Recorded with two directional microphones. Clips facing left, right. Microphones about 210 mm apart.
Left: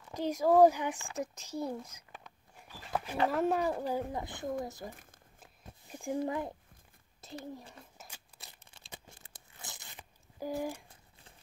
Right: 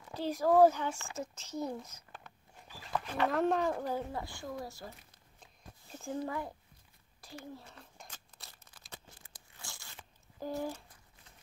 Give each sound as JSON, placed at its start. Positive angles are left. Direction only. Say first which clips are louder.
{"t": 0.1, "sound": "a child's voice", "louder": "left 1 dB", "side_deg": 15}
{"t": 3.3, "sound": "a child's voice", "louder": "right 1 dB", "side_deg": 5}
{"t": 5.4, "sound": "a sound", "louder": "left 1 dB", "side_deg": 10}
{"t": 7.2, "sound": "speech", "louder": "left 4 dB", "side_deg": 20}
{"t": 7.7, "sound": "a sound", "louder": "left 1 dB", "side_deg": 5}
{"t": 8.5, "sound": "crumpling", "louder": "left 1 dB", "side_deg": 25}
{"t": 9.1, "sound": "crunch", "louder": "left 2 dB", "side_deg": 20}